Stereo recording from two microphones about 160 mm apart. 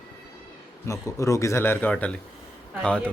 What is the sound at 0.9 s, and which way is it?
A man's voice, 20° left (ahead or behind).